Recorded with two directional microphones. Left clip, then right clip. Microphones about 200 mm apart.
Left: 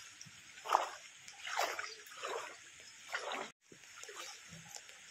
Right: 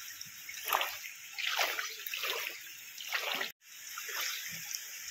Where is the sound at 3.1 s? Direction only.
15° right (ahead or behind).